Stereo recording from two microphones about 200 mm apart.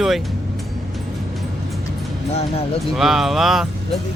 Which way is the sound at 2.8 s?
Centre (ahead or behind).